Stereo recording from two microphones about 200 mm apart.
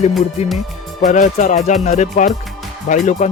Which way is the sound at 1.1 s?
35° left (ahead or behind).